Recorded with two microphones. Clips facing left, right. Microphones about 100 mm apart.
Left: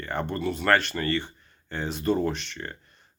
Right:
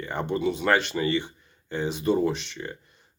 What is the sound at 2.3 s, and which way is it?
Speech, 55° left (ahead or behind).